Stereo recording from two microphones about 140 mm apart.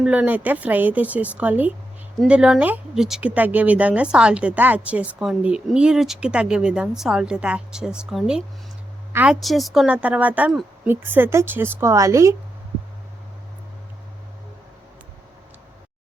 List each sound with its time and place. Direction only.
0.0 s speech: 10° right (ahead or behind)